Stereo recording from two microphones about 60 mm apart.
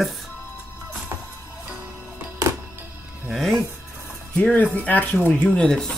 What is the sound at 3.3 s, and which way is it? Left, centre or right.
Music, centre.